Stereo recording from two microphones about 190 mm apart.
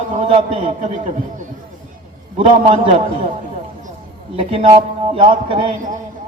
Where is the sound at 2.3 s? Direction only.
30° right (ahead or behind).